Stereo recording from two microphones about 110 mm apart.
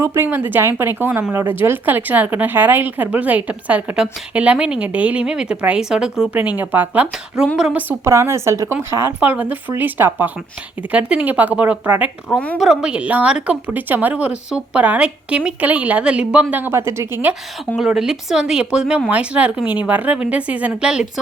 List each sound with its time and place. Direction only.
0.0 s a woman's voice: 25° right (ahead or behind); by 7.8 s 5° right (ahead or behind)
7.8 s speech: 20° right (ahead or behind)
17.7 s speech: 5° right (ahead or behind)